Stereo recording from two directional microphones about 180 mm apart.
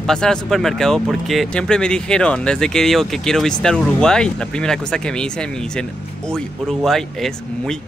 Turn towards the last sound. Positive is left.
turn(degrees=0)  # may be behind; listen again after turning